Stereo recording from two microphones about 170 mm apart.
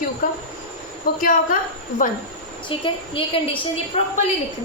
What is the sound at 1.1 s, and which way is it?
Speech, 60° left (ahead or behind).